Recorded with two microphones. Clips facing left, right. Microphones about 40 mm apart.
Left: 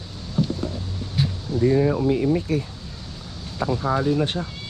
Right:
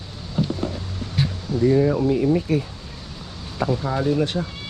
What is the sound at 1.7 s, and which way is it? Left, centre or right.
Speech, centre.